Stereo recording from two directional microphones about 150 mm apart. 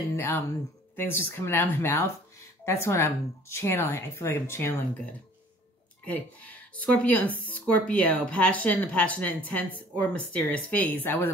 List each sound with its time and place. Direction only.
0.1 s speech: 15° left (ahead or behind)
6.0 s speech: 10° left (ahead or behind)